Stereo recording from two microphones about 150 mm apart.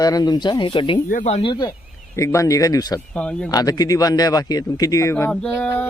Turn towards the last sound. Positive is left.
turn(degrees=5)  # may be behind; listen again after turning